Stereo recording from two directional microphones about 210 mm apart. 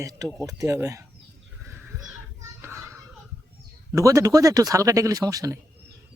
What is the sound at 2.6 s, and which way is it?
Children playing, 15° right (ahead or behind).